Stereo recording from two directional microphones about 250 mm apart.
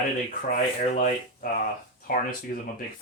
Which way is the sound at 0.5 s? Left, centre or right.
Left.